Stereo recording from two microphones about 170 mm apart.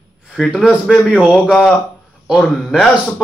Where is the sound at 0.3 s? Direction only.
Centre (ahead or behind).